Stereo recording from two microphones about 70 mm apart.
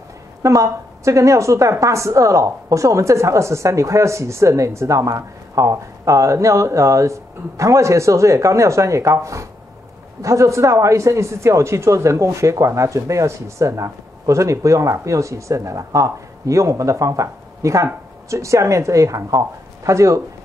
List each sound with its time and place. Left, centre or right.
0.4 s speech: right